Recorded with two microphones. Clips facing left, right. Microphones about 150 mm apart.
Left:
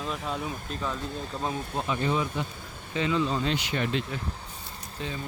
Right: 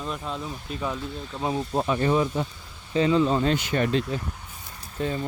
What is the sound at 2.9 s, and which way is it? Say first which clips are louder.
Speech: right 6 dB; 35° right (ahead or behind).